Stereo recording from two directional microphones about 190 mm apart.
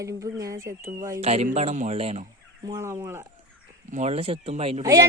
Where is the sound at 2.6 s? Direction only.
15° right (ahead or behind).